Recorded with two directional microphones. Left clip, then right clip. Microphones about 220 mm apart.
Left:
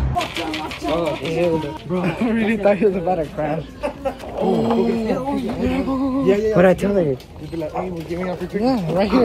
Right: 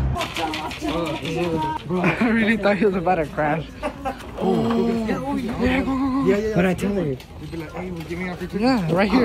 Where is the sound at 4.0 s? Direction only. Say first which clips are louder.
Left 4 dB; 35° right (ahead or behind).